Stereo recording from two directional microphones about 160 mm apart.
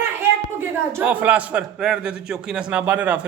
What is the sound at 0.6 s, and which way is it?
A man's voice, 10° right (ahead or behind).